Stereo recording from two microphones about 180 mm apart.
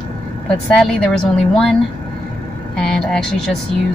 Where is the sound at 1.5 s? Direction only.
5° left (ahead or behind).